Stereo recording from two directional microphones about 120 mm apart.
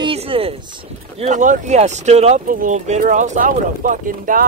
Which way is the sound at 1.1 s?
75° right (ahead or behind).